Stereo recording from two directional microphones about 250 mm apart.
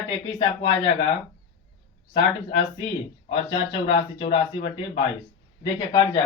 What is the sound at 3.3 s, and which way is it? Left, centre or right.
Speech, left.